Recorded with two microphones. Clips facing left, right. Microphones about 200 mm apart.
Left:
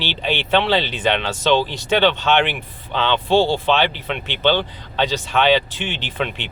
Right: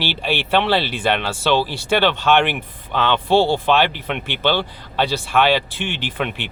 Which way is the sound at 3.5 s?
15° right (ahead or behind).